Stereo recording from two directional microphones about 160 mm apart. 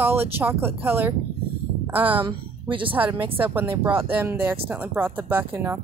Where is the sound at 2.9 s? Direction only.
10° right (ahead or behind).